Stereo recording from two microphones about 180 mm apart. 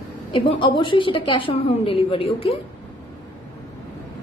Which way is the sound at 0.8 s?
30° left (ahead or behind).